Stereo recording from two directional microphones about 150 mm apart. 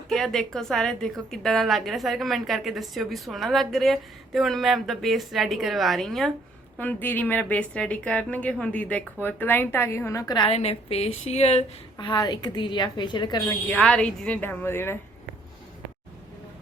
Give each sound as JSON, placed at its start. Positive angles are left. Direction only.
{"t": 0.1, "sound": "a woman's voice", "side_deg": 0}
{"t": 6.7, "sound": "a woman's voice", "side_deg": 10}
{"t": 10.5, "sound": "a woman's voice", "side_deg": 45}
{"t": 11.9, "sound": "a woman's voice", "side_deg": 30}
{"t": 13.5, "sound": "a woman's voice", "side_deg": 10}